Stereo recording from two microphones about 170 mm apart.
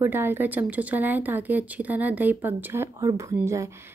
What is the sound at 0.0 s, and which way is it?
Speech, 10° right (ahead or behind).